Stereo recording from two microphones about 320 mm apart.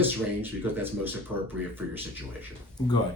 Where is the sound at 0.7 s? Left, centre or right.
Centre.